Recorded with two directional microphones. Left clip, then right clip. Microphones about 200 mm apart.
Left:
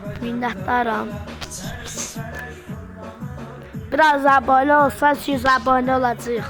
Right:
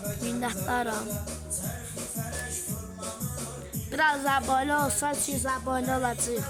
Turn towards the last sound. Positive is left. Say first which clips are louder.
# left 11 dB
turn(degrees=0)  # may be behind; listen again after turning